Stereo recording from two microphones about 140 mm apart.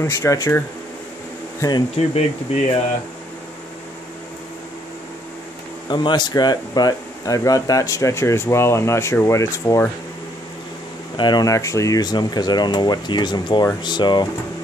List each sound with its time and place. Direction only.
0.0 s speech: 20° left (ahead or behind)
2.0 s speech: 50° left (ahead or behind)
5.9 s speech: 35° left (ahead or behind)
11.1 s speech: 30° left (ahead or behind)